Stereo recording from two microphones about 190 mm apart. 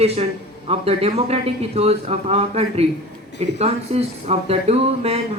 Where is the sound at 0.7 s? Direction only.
35° right (ahead or behind).